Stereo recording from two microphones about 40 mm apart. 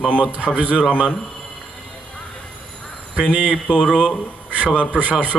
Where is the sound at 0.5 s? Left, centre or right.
Right.